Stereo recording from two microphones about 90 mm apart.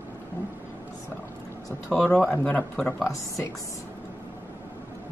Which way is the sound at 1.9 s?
15° left (ahead or behind).